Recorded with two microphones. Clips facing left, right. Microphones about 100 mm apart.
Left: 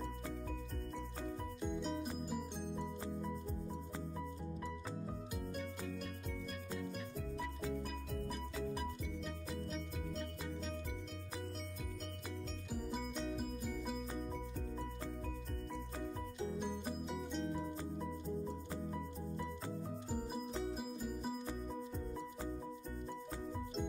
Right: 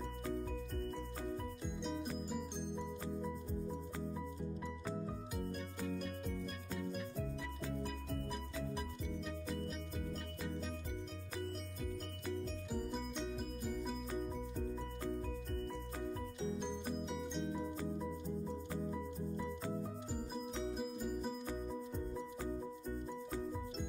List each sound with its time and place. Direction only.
1.8 s music: centre (ahead or behind)
9.7 s music: centre (ahead or behind)
12.7 s music: centre (ahead or behind)
17.1 s music: centre (ahead or behind)
20.7 s music: centre (ahead or behind)